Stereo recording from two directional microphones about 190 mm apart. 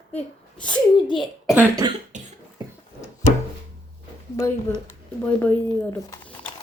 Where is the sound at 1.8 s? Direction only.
20° right (ahead or behind).